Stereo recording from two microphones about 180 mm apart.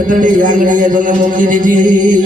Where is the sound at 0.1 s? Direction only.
50° right (ahead or behind).